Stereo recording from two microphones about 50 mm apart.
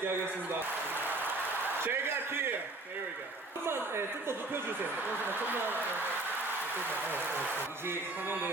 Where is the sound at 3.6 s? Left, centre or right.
Right.